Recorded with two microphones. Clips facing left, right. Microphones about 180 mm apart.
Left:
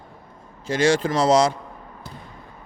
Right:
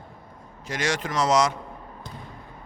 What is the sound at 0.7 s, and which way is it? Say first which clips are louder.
Speech: left 8 dB; 30° left (ahead or behind).